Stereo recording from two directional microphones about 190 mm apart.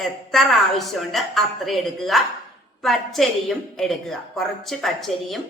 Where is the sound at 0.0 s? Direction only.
Centre (ahead or behind).